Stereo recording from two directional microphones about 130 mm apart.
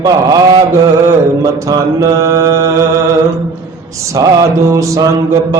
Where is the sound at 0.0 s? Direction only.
30° right (ahead or behind).